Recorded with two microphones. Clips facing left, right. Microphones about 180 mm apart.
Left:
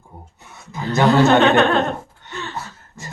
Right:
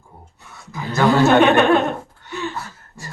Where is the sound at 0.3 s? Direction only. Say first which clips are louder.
Even; 20° left (ahead or behind).